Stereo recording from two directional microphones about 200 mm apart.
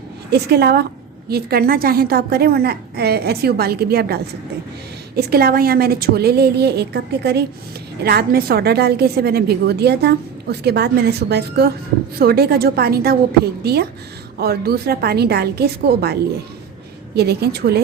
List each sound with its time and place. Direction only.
0.3 s a woman's voice: 55° right (ahead or behind)
17.2 s a woman's voice: 55° right (ahead or behind)